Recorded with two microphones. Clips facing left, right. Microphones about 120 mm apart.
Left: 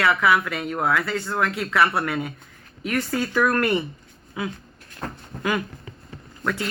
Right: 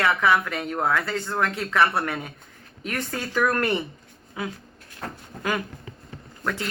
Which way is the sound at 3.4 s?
25° right (ahead or behind).